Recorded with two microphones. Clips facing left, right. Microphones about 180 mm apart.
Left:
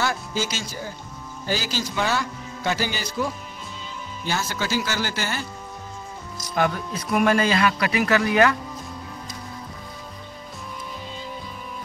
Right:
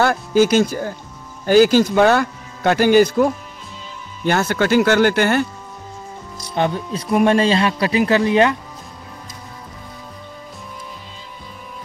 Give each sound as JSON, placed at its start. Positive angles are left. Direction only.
{"t": 0.0, "sound": "speech", "side_deg": -55}
{"t": 6.5, "sound": "speech", "side_deg": -25}